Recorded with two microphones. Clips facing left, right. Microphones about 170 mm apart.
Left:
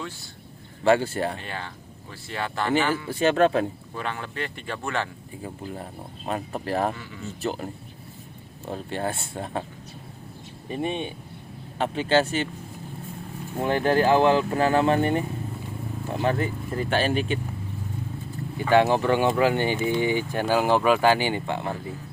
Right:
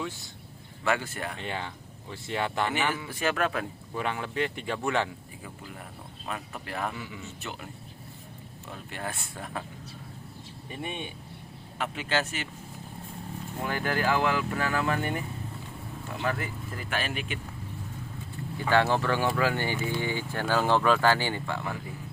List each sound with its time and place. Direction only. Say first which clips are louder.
0.9 s speech: left 9 dB; 30° left (ahead or behind)
1.4 s speech: right 1 dB; 20° right (ahead or behind)
3.1 s speech: left 8 dB; 30° left (ahead or behind)
3.9 s speech: right 6 dB; 15° right (ahead or behind)
5.4 s speech: left 11 dB; 35° left (ahead or behind)
6.9 s speech: right 1 dB; 15° right (ahead or behind)
7.4 s speech: left 10 dB; 35° left (ahead or behind)
10.8 s speech: left 8 dB; 25° left (ahead or behind)
13.6 s speech: left 8 dB; 25° left (ahead or behind)
18.7 s speech: left 5 dB; 15° left (ahead or behind)